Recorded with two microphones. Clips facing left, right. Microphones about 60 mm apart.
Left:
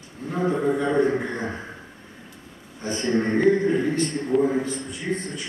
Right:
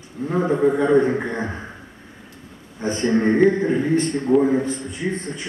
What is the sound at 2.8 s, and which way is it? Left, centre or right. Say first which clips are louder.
Speech: right 5 dB; right.